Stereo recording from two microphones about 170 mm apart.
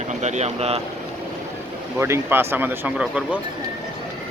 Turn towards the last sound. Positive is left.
turn(degrees=-5)  # may be behind; listen again after turning